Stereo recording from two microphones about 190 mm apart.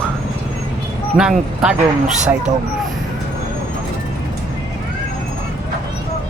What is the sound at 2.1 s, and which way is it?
Speech, 40° right (ahead or behind).